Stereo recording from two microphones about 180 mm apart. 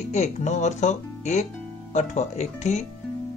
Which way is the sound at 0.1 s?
40° left (ahead or behind).